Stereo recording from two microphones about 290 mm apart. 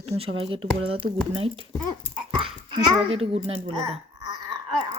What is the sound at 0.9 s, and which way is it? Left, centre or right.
Speech, centre.